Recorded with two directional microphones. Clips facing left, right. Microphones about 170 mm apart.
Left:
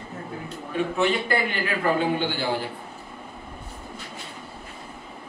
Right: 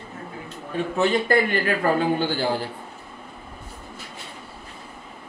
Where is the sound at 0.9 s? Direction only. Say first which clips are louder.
Right 5 dB; 40° right (ahead or behind).